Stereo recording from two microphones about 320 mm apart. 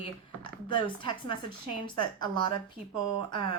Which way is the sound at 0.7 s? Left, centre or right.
Centre.